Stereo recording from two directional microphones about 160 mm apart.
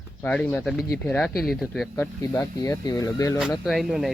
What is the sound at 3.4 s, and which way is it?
Speech, centre (ahead or behind).